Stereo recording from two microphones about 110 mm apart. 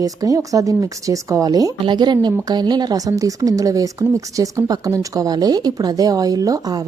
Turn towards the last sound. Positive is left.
turn(degrees=-35)  # may be behind; listen again after turning